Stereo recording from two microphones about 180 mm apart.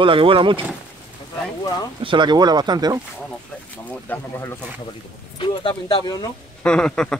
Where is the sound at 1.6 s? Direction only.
20° left (ahead or behind).